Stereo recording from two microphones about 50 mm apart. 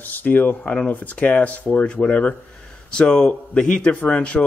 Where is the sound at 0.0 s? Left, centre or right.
Left.